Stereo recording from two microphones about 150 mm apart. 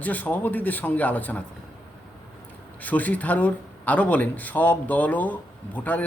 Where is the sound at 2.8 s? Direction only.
10° left (ahead or behind).